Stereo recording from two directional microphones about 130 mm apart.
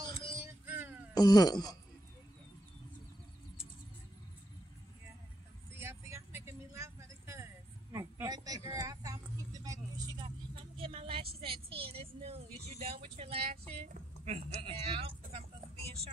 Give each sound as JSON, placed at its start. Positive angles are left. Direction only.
{"t": 0.1, "sound": "music", "side_deg": 40}
{"t": 0.7, "sound": "music", "side_deg": -15}
{"t": 1.1, "sound": "speech", "side_deg": 30}
{"t": 5.8, "sound": "vehicle", "side_deg": -20}
{"t": 13.8, "sound": "a sound", "side_deg": -65}